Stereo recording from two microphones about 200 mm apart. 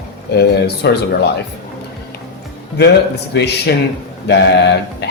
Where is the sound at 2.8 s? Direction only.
55° left (ahead or behind).